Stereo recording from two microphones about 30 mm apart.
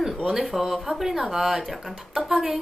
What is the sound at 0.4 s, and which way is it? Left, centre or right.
Speech, centre.